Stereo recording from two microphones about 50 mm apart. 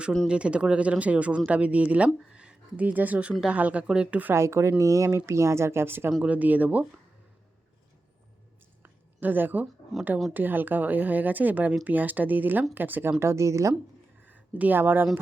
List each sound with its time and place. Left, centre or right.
0.3 s speech: right
2.3 s a sound: right
2.8 s speech: right
3.8 s speech: centre
4.4 s speech: right
4.8 s speech: right
6.2 s speech: right
8.8 s a sound: right
10.3 s speech: right
14.2 s a sound: right